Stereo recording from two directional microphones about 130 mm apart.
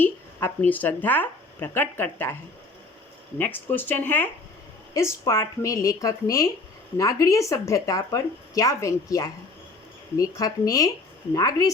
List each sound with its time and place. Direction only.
0.0 s speech: 15° left (ahead or behind)
3.3 s speech: 15° left (ahead or behind)